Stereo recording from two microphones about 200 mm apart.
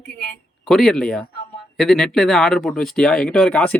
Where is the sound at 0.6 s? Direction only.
Centre (ahead or behind).